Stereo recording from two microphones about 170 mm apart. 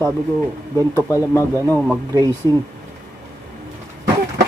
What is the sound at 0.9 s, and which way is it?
Speech, 15° left (ahead or behind).